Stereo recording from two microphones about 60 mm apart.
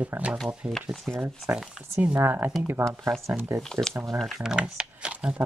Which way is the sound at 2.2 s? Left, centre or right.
Right.